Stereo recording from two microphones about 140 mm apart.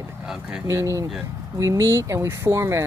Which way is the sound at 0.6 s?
25° right (ahead or behind).